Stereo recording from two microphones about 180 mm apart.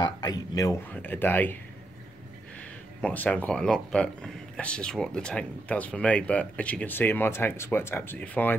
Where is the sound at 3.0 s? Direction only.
10° left (ahead or behind).